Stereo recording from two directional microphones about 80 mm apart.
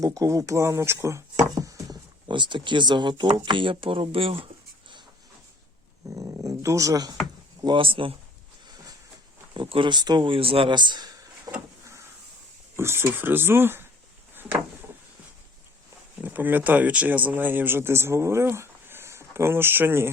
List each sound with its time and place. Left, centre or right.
0.0 s speech: right
1.5 s a sound: right
2.3 s speech: right
3.4 s speech: right
6.1 s a sound: right
7.6 s speech: right
9.6 s speech: right
12.7 s speech: right
14.3 s a sound: right
16.2 s speech: right